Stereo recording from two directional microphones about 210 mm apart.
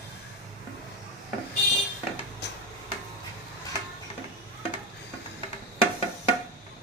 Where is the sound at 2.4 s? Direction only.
55° left (ahead or behind).